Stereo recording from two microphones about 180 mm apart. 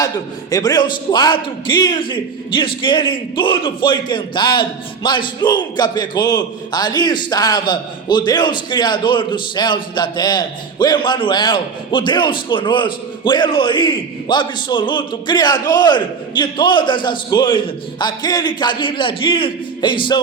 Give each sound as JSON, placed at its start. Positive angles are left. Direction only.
{"t": 0.5, "sound": "a man's voice", "side_deg": 20}